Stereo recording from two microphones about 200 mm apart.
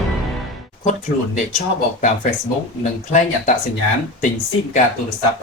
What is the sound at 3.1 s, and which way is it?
Speech, 40° left (ahead or behind).